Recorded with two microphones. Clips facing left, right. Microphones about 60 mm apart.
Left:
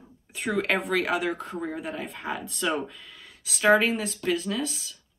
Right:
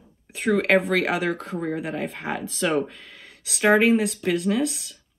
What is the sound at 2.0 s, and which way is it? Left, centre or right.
Speech, right.